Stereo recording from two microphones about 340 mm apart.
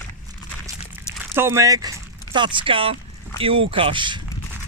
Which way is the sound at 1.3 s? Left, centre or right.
Centre.